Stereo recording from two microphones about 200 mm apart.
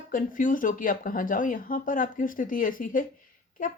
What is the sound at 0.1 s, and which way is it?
A woman's voice, 40° left (ahead or behind).